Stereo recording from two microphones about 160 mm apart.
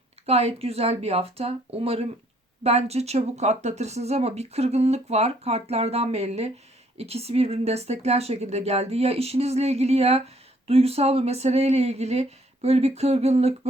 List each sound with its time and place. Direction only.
0.3 s speech: 40° right (ahead or behind)